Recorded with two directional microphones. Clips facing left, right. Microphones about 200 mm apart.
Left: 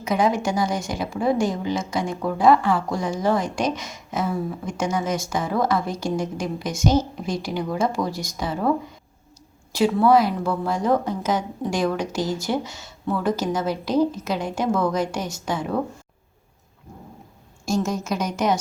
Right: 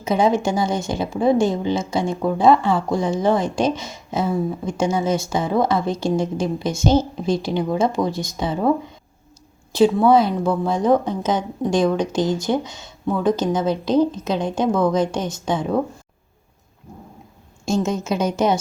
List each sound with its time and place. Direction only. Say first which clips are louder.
0.0 s a woman's voice: right 3 dB; 25° right (ahead or behind)
9.7 s a woman's voice: right 3 dB; 25° right (ahead or behind)
17.7 s a woman's voice: right 3 dB; 25° right (ahead or behind)